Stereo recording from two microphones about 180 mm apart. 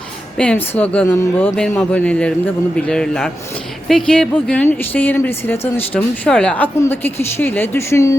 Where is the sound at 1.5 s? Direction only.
5° left (ahead or behind).